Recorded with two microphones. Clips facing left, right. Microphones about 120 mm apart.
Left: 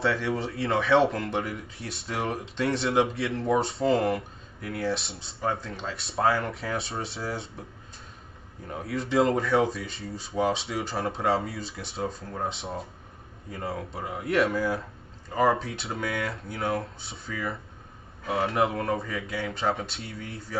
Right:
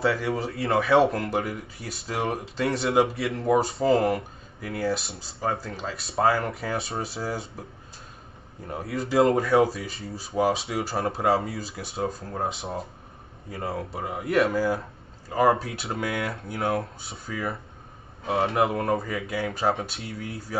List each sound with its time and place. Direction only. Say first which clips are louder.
0.0 s speech: right 2 dB; centre (ahead or behind)
8.6 s speech: right 1 dB; 5° right (ahead or behind)
18.2 s speech: right 3 dB; 25° right (ahead or behind)
18.5 s speech: right 2 dB; centre (ahead or behind)